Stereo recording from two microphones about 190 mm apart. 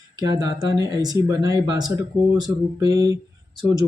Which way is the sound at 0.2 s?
20° right (ahead or behind).